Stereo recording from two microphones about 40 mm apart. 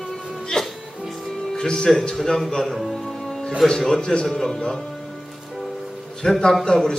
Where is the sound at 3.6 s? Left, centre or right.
Centre.